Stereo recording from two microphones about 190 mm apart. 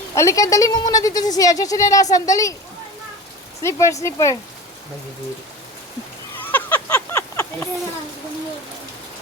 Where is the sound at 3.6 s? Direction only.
15° left (ahead or behind).